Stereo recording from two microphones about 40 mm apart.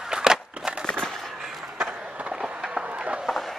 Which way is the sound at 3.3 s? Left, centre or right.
Centre.